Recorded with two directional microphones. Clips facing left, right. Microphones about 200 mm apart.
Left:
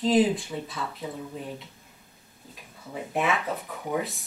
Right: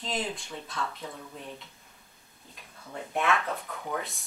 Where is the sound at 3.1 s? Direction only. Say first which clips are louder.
Left 1 dB; 5° left (ahead or behind).